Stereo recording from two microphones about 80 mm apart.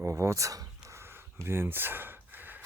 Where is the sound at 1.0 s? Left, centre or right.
Right.